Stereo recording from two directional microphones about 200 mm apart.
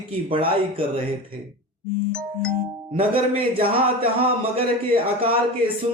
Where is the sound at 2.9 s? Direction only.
30° right (ahead or behind).